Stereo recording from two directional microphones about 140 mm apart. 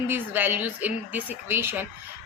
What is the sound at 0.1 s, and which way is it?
A woman's voice, 15° right (ahead or behind).